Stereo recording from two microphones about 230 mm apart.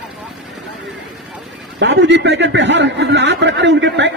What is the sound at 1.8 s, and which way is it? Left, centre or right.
A man's voice, right.